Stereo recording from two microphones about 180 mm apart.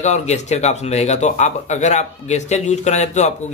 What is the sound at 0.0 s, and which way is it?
Speech, 40° left (ahead or behind).